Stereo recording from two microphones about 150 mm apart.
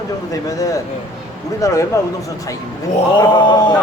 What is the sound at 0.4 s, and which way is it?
Speech, 25° left (ahead or behind).